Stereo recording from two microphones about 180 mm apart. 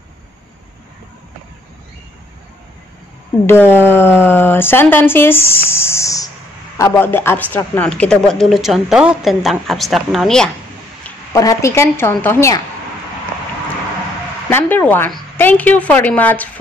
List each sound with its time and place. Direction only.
3.4 s a woman's voice: 10° left (ahead or behind)
11.3 s a woman's voice: 15° left (ahead or behind)
14.5 s a woman's voice: 10° left (ahead or behind)